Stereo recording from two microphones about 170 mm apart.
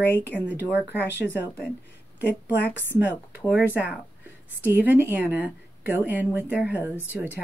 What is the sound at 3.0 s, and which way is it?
A woman's voice, 10° right (ahead or behind).